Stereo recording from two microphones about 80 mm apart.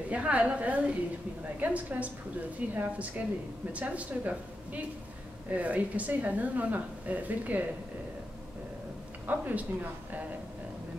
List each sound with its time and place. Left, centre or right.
0.1 s a woman's voice: centre
9.3 s a woman's voice: right